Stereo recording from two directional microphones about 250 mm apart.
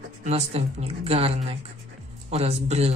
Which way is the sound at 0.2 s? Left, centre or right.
Right.